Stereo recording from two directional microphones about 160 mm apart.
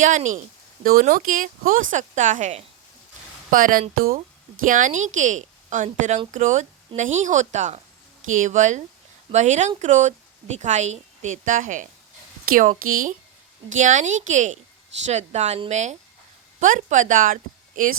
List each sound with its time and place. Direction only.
0.0 s a woman's voice: 50° right (ahead or behind)
0.9 s speech: 60° right (ahead or behind); by 2.6 s 45° right (ahead or behind)
3.5 s speech: 60° right (ahead or behind)
4.6 s a woman's voice: 55° right (ahead or behind)